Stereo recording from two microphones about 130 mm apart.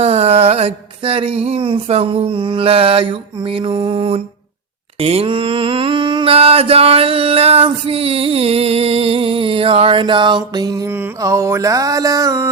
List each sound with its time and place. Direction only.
0.0 s mantra: 55° right (ahead or behind); by 10.8 s 30° right (ahead or behind)
10.8 s mantra: 15° right (ahead or behind)